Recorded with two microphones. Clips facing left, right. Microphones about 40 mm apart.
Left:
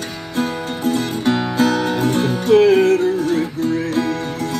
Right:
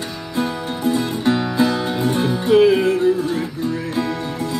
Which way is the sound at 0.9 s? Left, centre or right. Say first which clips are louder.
Even; left.